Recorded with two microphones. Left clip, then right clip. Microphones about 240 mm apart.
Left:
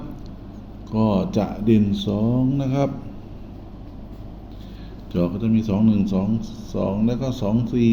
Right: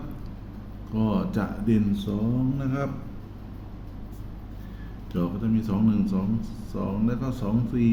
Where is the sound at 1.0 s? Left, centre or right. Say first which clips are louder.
Left 6 dB; centre.